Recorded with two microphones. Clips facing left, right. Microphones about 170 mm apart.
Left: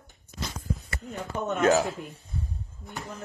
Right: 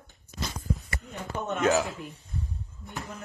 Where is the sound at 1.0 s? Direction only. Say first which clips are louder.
Left 2 dB; 40° left (ahead or behind).